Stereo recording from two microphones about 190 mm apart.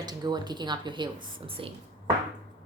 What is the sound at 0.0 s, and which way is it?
Speech, 20° right (ahead or behind).